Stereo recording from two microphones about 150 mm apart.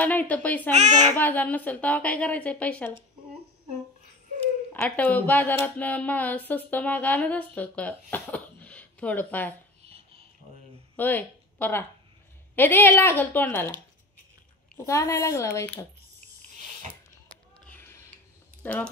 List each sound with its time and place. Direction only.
0.0 s speech: 10° left (ahead or behind)
0.7 s a child's voice: 50° right (ahead or behind)
1.1 s speech: 10° left (ahead or behind)
4.7 s speech: 10° left (ahead or behind)
9.9 s rub: 40° right (ahead or behind)
11.0 s speech: 10° left (ahead or behind)
14.8 s speech: 20° left (ahead or behind)
17.6 s a sound: 10° left (ahead or behind)
18.6 s speech: 10° left (ahead or behind)